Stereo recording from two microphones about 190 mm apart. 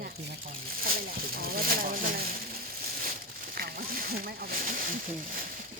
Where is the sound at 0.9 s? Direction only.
50° right (ahead or behind).